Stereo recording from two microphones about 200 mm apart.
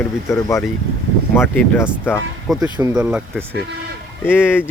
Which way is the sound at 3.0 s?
5° right (ahead or behind).